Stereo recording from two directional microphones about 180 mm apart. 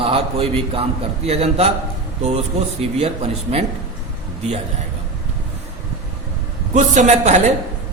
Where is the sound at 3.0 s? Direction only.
35° right (ahead or behind).